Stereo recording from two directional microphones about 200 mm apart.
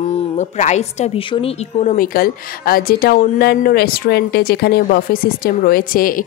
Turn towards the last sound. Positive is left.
turn(degrees=45)  # may be behind; listen again after turning